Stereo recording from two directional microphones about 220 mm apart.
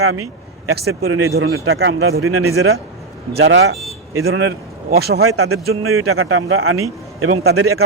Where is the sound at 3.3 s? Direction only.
55° right (ahead or behind).